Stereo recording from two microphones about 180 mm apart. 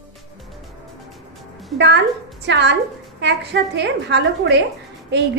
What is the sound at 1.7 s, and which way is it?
A woman's voice, 75° right (ahead or behind).